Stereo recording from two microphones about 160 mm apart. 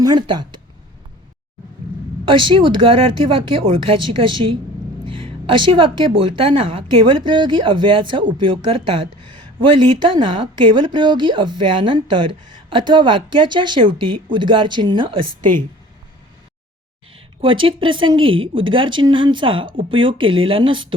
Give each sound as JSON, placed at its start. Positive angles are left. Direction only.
{"t": 0.0, "sound": "speech", "side_deg": -30}
{"t": 2.2, "sound": "speech", "side_deg": -30}
{"t": 17.4, "sound": "speech", "side_deg": -35}